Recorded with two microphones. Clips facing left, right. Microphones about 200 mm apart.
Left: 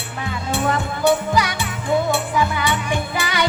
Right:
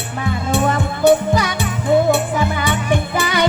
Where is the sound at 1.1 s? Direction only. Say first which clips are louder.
Right 4 dB; 45° right (ahead or behind).